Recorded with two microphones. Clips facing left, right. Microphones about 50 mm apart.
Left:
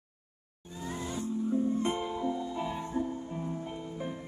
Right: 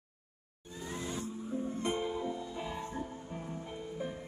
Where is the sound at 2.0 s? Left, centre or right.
Left.